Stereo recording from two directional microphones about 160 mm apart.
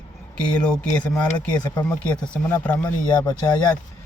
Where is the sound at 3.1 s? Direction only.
25° left (ahead or behind).